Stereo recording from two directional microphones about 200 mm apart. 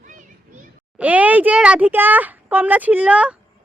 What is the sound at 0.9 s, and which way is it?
A child's voice, 10° right (ahead or behind).